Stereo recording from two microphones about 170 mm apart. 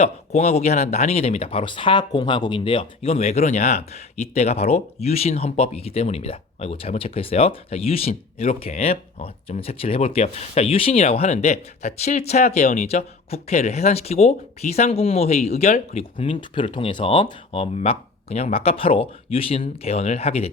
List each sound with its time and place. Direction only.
0.0 s speech: 40° left (ahead or behind)